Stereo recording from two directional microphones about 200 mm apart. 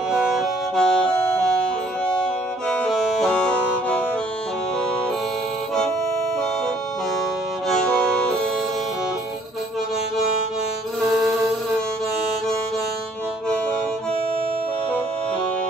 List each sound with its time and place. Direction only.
0.1 s music: 5° right (ahead or behind)
11.1 s music: centre (ahead or behind)